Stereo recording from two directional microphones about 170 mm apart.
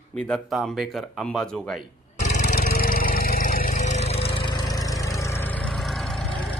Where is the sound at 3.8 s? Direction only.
40° left (ahead or behind).